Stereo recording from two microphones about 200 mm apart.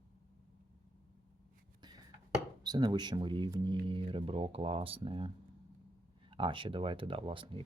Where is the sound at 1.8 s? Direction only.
20° right (ahead or behind).